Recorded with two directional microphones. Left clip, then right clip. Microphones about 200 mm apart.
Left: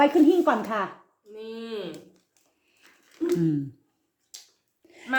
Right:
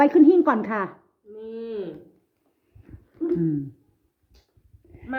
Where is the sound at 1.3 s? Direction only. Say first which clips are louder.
Right 2 dB; 35° right (ahead or behind).